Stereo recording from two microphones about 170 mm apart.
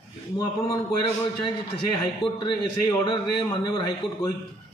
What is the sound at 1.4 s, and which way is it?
A man's voice, 30° left (ahead or behind).